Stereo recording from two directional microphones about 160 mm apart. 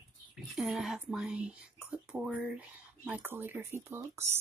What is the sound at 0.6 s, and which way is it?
Speech, centre (ahead or behind).